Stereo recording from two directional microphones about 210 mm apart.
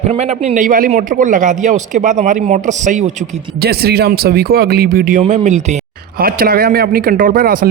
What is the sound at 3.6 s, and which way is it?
Speech, 45° right (ahead or behind).